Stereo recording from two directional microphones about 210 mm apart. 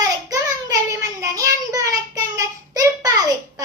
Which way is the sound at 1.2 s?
15° right (ahead or behind).